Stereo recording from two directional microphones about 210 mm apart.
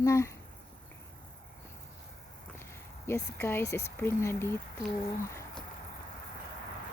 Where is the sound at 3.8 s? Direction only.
10° left (ahead or behind).